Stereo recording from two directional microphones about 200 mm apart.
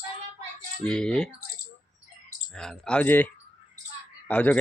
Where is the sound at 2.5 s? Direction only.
5° left (ahead or behind).